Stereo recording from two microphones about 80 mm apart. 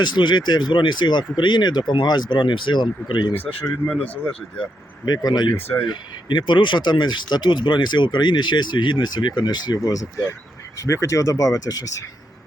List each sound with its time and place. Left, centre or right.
0.0 s speech: left
3.8 s speech: centre
5.0 s speech: left
5.5 s speech: left
5.8 s speech: left